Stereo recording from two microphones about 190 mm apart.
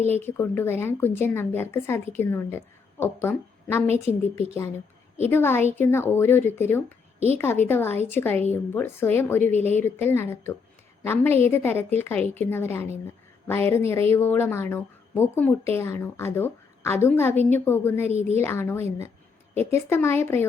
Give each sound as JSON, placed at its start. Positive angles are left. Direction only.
{"t": 0.0, "sound": "a woman's voice", "side_deg": 10}
{"t": 5.3, "sound": "a woman's voice", "side_deg": 10}
{"t": 9.5, "sound": "speech", "side_deg": -35}
{"t": 9.7, "sound": "a woman's voice", "side_deg": 10}